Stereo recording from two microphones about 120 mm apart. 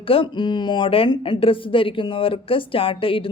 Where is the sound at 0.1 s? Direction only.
45° left (ahead or behind).